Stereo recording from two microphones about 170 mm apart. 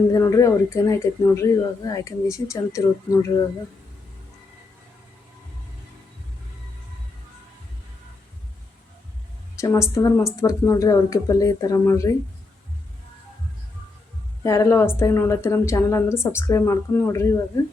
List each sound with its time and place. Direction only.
0.1 s a woman's voice: 20° left (ahead or behind)
9.6 s a woman's voice: 15° left (ahead or behind)
14.4 s a woman's voice: 20° left (ahead or behind)